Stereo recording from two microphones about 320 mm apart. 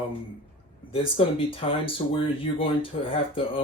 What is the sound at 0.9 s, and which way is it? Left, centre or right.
Speech, centre.